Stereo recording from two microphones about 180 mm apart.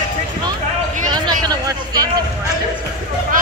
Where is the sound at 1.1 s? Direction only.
20° right (ahead or behind).